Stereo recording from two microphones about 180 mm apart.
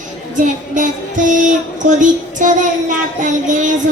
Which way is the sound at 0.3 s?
45° right (ahead or behind).